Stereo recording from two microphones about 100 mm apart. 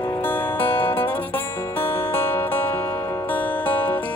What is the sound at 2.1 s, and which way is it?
Music, 20° left (ahead or behind).